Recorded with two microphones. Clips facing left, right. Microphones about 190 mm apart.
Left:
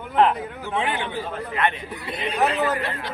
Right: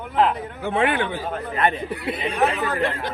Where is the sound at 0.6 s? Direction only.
55° right (ahead or behind).